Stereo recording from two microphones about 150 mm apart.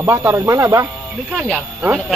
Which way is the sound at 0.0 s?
15° right (ahead or behind).